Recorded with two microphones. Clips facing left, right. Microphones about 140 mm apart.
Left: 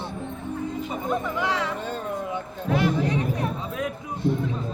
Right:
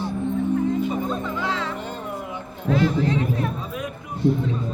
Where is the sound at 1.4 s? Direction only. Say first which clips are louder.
Left 1 dB; 15° left (ahead or behind).